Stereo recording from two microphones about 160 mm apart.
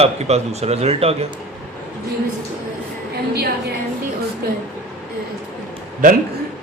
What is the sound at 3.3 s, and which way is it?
A woman's voice, 75° right (ahead or behind).